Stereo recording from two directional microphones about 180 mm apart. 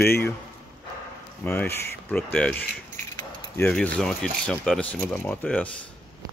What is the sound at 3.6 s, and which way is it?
Speech, 5° left (ahead or behind).